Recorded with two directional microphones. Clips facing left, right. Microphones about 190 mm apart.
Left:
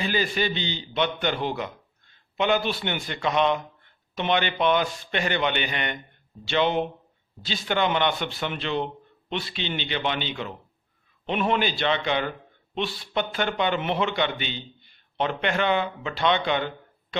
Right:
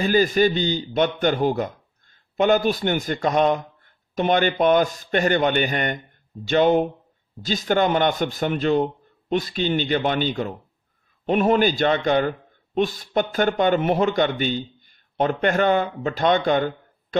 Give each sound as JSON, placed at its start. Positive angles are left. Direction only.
{"t": 0.0, "sound": "a man's voice", "side_deg": -45}